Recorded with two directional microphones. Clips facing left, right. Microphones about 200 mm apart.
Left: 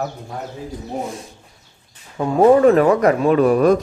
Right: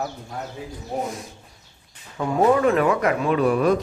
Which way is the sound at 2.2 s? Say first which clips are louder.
Left 6 dB; 35° left (ahead or behind).